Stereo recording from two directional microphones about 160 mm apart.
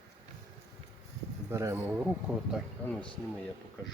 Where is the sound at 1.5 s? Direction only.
20° right (ahead or behind).